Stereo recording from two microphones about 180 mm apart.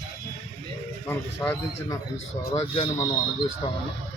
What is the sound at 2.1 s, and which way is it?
Speech, 40° left (ahead or behind).